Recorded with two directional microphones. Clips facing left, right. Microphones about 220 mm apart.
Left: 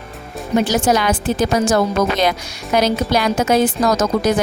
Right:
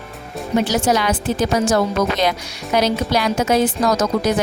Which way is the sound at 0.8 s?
50° left (ahead or behind).